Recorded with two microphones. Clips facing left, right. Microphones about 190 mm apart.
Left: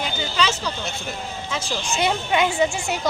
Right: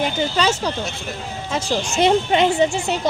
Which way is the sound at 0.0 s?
45° right (ahead or behind).